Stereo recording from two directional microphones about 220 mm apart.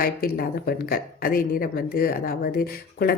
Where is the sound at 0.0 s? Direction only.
45° left (ahead or behind).